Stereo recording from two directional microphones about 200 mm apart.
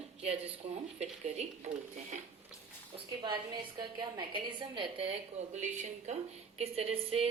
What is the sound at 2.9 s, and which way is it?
A woman's voice, 25° right (ahead or behind).